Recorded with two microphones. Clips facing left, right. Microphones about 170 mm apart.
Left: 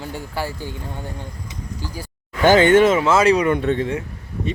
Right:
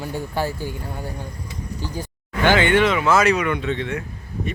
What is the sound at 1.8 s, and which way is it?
Speech, 20° right (ahead or behind).